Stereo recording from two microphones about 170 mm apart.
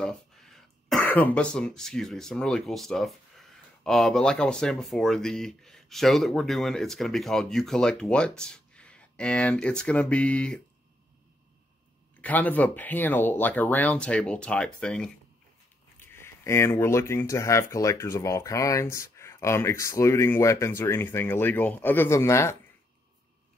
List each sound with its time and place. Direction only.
0.0 s speech: centre (ahead or behind)
12.2 s speech: 10° left (ahead or behind)